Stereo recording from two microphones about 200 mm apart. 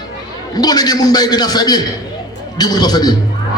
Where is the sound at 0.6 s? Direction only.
20° left (ahead or behind).